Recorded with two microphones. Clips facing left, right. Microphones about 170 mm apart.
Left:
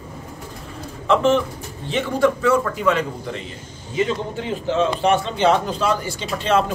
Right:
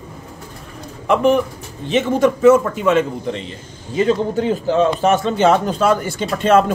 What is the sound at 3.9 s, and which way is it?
A man's voice, 40° right (ahead or behind).